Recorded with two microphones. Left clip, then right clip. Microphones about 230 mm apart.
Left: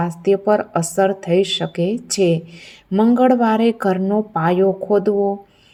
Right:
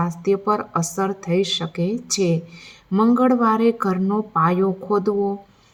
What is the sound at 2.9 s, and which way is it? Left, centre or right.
Speech, right.